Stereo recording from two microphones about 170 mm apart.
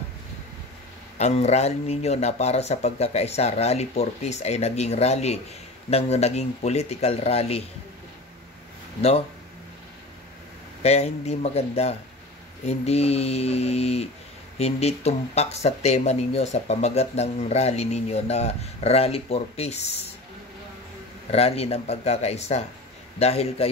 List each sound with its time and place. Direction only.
1.1 s speech: 40° left (ahead or behind)
10.8 s speech: 40° left (ahead or behind)
21.3 s speech: 35° left (ahead or behind)